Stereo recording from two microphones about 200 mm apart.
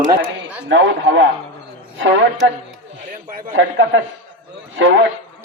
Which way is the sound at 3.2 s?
45° right (ahead or behind).